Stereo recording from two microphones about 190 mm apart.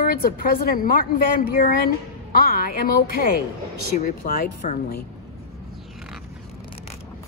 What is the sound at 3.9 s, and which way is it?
A woman's voice, 45° left (ahead or behind).